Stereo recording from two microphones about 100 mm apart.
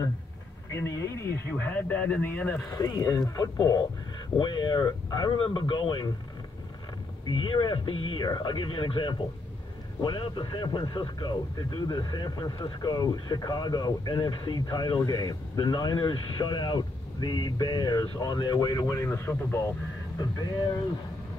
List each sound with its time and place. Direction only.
0.7 s speech: 30° left (ahead or behind)
2.7 s speech: 40° left (ahead or behind)
7.2 s speech: 55° left (ahead or behind); by 19.7 s 25° left (ahead or behind)
20.2 s speech: 40° left (ahead or behind)